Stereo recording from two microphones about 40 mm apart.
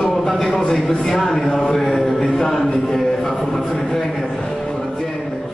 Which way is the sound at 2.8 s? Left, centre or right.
Centre.